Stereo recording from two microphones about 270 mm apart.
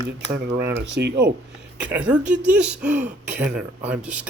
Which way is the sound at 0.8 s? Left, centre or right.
Right.